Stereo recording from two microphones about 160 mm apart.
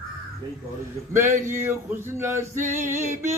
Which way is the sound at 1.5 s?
15° right (ahead or behind).